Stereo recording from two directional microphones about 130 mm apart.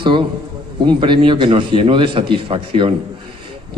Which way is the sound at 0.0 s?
40° right (ahead or behind).